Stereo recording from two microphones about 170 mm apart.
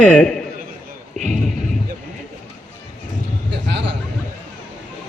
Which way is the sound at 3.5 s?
90° right.